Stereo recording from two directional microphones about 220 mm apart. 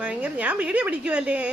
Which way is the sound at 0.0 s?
5° right (ahead or behind).